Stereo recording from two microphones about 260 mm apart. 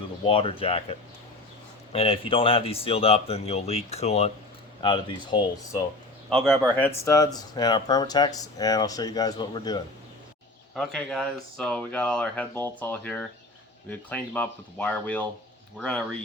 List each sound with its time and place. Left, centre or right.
0.3 s speech: left
6.3 s speech: centre
10.8 s speech: centre